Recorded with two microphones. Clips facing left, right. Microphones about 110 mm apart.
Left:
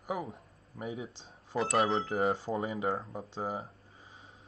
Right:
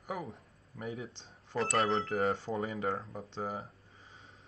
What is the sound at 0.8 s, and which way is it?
Speech, 5° left (ahead or behind).